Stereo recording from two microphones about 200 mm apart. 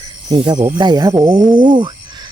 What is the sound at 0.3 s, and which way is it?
Speech, 20° right (ahead or behind).